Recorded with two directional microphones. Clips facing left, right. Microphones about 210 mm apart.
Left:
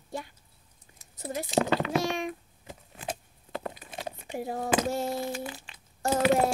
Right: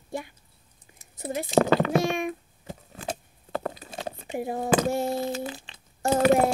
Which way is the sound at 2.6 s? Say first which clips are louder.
Right 3 dB; 35° right (ahead or behind).